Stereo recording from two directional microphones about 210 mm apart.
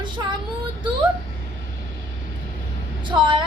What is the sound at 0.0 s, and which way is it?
Child singing, 20° right (ahead or behind).